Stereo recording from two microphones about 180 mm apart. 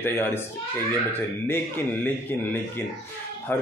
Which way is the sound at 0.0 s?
10° left (ahead or behind).